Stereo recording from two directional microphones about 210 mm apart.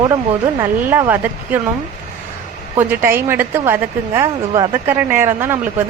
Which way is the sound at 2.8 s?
10° right (ahead or behind).